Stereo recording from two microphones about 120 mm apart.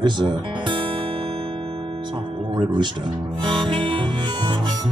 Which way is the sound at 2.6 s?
40° right (ahead or behind).